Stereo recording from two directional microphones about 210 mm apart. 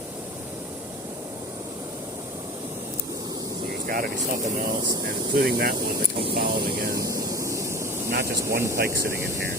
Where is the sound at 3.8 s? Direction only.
45° right (ahead or behind).